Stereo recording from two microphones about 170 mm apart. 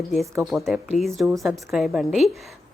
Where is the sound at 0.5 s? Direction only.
Centre (ahead or behind).